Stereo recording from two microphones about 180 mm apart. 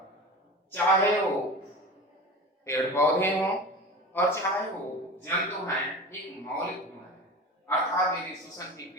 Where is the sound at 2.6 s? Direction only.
15° left (ahead or behind).